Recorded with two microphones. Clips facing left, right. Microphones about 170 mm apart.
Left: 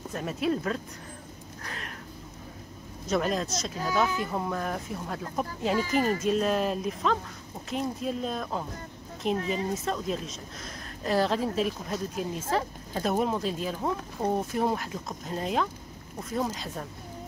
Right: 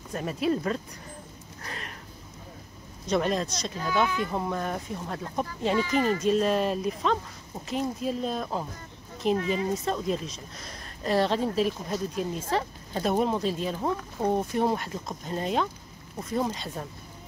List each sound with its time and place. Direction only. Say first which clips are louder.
0.1 s speech: right 2 dB; centre (ahead or behind)
1.6 s a sound: right 1 dB; centre (ahead or behind)
3.1 s speech: right 1 dB; centre (ahead or behind)
5.8 s speech: right 1 dB; 45° left (ahead or behind)
6.2 s speech: right 2 dB; centre (ahead or behind)